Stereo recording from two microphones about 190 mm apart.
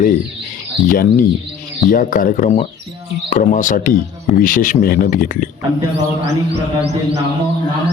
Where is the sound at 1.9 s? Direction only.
45° left (ahead or behind).